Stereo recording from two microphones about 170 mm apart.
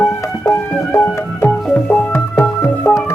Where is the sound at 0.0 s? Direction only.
15° left (ahead or behind).